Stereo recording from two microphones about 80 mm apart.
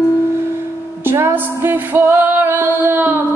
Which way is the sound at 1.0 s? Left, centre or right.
Right.